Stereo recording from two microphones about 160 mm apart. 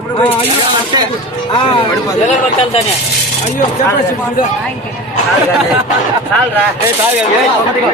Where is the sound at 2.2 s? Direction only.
40° left (ahead or behind).